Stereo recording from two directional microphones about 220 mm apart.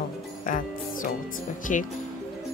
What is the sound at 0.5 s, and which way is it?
Music, 40° left (ahead or behind).